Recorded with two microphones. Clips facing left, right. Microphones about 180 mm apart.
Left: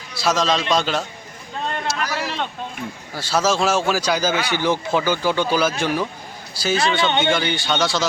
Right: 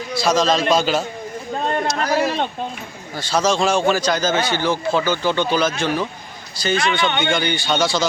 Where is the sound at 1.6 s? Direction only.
45° right (ahead or behind).